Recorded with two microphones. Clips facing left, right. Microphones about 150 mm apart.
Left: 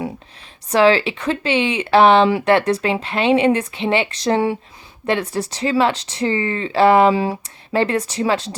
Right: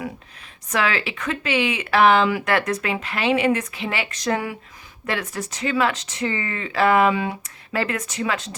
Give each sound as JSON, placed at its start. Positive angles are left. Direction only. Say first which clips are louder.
{"t": 0.7, "sound": "speech", "louder": "left 9 dB", "side_deg": 30}